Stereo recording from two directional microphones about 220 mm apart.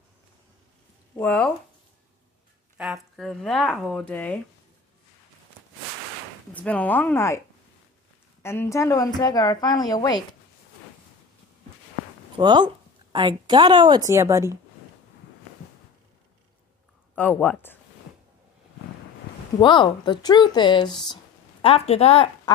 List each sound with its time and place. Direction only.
1.1 s speech: 5° left (ahead or behind)
2.8 s speech: centre (ahead or behind)
6.5 s a woman's voice: 5° left (ahead or behind)
12.4 s a woman's voice: 20° right (ahead or behind)
17.1 s a woman's voice: 10° left (ahead or behind)
19.6 s speech: 20° left (ahead or behind)